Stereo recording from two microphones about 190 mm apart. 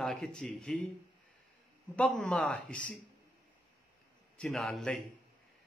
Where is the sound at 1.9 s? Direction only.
5° left (ahead or behind).